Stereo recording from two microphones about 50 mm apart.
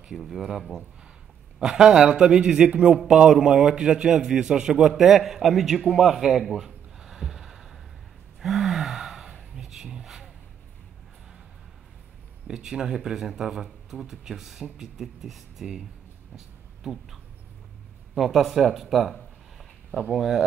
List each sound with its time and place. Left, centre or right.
0.1 s a man's voice: centre
3.1 s speech: centre
5.8 s a sound: centre
8.4 s gasp: centre
12.4 s speech: centre
20.2 s speech: centre